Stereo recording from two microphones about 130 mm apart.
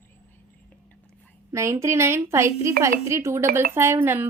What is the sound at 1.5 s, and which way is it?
A woman's voice, 25° right (ahead or behind).